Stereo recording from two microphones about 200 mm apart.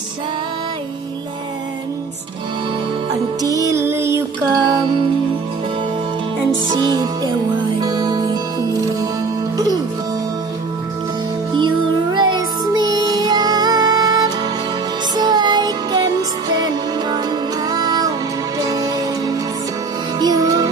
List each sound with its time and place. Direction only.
3.4 s music: 15° right (ahead or behind)
6.7 s music: 20° right (ahead or behind)
12.1 s music: 20° right (ahead or behind)